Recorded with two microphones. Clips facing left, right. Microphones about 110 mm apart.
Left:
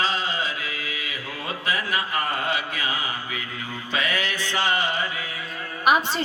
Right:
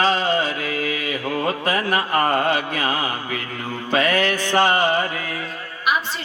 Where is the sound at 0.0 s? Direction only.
50° right (ahead or behind).